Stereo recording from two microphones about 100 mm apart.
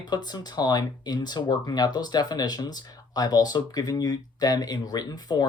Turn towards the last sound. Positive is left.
turn(degrees=40)  # may be behind; listen again after turning